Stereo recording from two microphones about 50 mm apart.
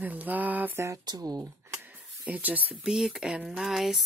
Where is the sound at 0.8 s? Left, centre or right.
Right.